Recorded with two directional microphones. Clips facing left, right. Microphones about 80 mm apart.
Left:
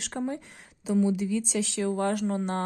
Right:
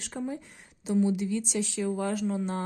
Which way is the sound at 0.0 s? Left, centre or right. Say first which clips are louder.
Left 3 dB; left.